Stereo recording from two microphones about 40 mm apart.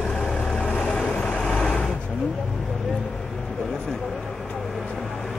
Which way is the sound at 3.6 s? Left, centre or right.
Centre.